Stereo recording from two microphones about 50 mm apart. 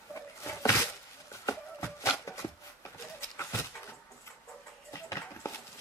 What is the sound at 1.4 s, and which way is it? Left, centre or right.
Music, left.